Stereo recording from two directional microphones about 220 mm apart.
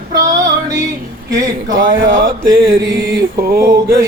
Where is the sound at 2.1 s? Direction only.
40° right (ahead or behind).